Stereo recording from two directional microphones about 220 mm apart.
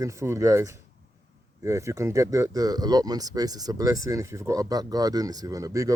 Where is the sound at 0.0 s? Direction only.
15° right (ahead or behind).